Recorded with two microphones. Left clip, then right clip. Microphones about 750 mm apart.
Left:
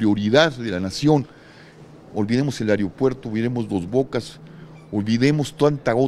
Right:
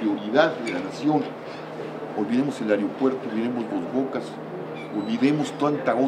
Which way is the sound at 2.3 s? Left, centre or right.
Left.